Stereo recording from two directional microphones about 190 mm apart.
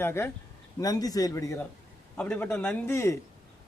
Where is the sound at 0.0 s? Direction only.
10° left (ahead or behind).